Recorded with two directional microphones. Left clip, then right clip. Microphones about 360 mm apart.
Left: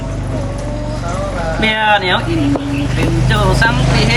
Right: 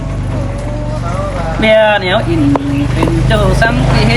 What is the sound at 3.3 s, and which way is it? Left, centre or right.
Speech, centre.